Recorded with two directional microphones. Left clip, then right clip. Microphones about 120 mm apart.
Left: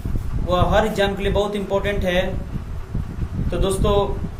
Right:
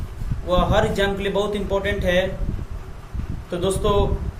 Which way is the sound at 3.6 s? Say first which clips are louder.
Left 1 dB; 20° right (ahead or behind).